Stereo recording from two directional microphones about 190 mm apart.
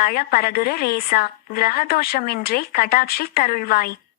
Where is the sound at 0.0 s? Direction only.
50° left (ahead or behind).